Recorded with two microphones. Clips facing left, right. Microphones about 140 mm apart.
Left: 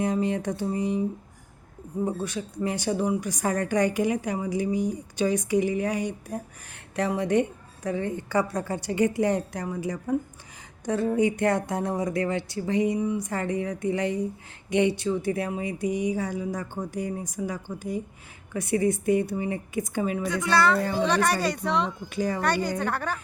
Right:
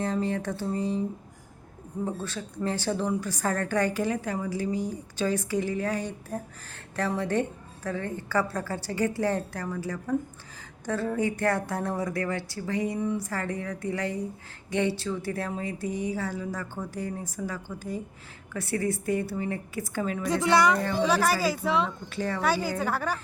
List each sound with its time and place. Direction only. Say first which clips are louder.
0.0 s a woman's voice: left 3 dB; 15° left (ahead or behind)
2.0 s a woman's voice: left 3 dB; 15° left (ahead or behind)
20.2 s a woman's voice: right 2 dB; 30° right (ahead or behind)
20.5 s speech: even; 15° right (ahead or behind)
21.0 s speech: right 1 dB; 5° right (ahead or behind)
22.1 s a woman's voice: left 5 dB; 15° left (ahead or behind)
22.4 s speech: right 3 dB; 5° right (ahead or behind)